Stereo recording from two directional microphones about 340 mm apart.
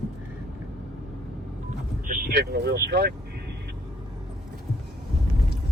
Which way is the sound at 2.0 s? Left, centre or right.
Right.